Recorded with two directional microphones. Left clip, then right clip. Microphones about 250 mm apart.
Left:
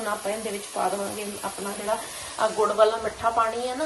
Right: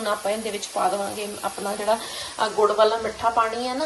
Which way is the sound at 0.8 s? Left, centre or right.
Centre.